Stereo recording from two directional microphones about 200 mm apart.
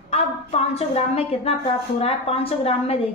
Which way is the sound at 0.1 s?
30° left (ahead or behind).